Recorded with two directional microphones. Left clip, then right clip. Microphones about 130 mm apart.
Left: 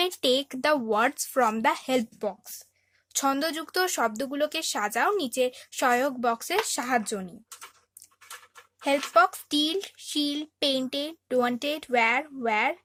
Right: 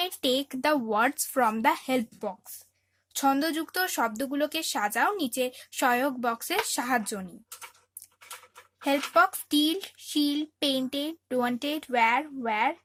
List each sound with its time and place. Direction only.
0.0 s speech: 20° left (ahead or behind)
3.1 s speech: 30° left (ahead or behind)
8.8 s speech: 10° left (ahead or behind)